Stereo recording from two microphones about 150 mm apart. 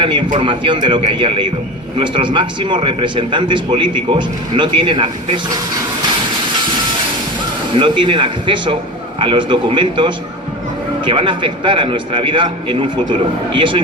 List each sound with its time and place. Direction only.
0.0 s a man's voice: 30° right (ahead or behind)
7.8 s a man's voice: 35° right (ahead or behind)